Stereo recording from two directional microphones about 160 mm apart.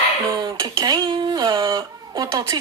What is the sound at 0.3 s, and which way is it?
Speech, 25° right (ahead or behind).